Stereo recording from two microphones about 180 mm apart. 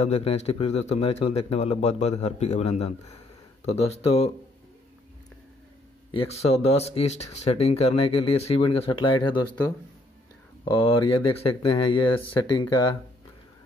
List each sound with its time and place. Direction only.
0.0 s speech: 35° left (ahead or behind)
6.1 s speech: 35° left (ahead or behind)
10.6 s speech: 30° left (ahead or behind)